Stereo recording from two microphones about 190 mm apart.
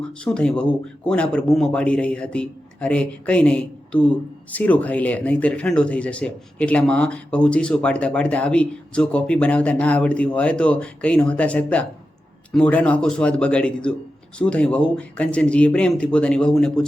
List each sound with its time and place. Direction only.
0.3 s speech: 5° left (ahead or behind)